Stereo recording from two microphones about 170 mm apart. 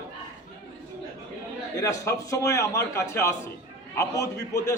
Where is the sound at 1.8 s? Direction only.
20° left (ahead or behind).